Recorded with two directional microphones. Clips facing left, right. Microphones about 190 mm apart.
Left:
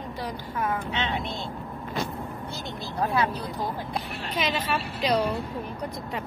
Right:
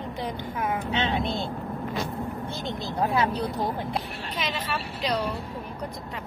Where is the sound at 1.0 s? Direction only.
30° right (ahead or behind).